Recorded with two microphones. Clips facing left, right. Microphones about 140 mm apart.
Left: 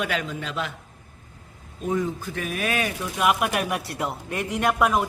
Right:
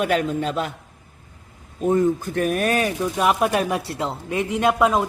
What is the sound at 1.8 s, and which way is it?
Speech, 55° right (ahead or behind).